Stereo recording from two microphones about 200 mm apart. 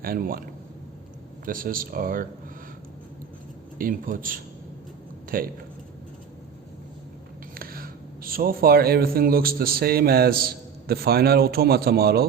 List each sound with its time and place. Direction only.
0.0 s speech: 45° right (ahead or behind)
1.5 s speech: 45° right (ahead or behind)
3.8 s speech: 45° right (ahead or behind)
7.5 s speech: 45° right (ahead or behind)